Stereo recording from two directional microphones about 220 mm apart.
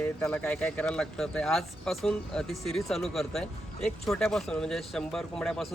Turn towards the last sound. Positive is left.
turn(degrees=0)  # may be behind; listen again after turning